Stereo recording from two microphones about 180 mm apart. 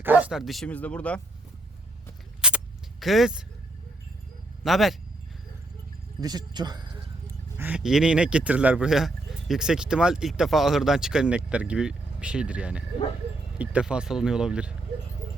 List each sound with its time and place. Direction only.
0.0 s speech: 10° right (ahead or behind)
2.4 s a sound: 5° right (ahead or behind)
3.0 s speech: centre (ahead or behind)
4.6 s speech: centre (ahead or behind)
6.1 s speech: 20° right (ahead or behind)
7.6 s speech: 5° right (ahead or behind)